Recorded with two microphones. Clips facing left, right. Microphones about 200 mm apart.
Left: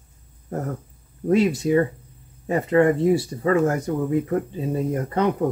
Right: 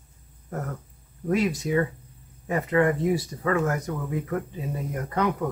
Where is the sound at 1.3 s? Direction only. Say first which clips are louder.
Left 6 dB; 25° left (ahead or behind).